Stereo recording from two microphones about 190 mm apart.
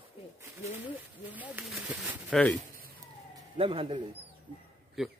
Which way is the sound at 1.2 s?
10° right (ahead or behind).